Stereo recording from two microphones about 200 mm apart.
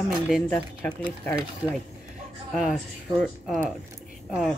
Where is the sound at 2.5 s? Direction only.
Centre (ahead or behind).